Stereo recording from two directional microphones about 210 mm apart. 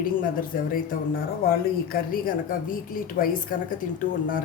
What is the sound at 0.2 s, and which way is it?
Speech, 40° left (ahead or behind).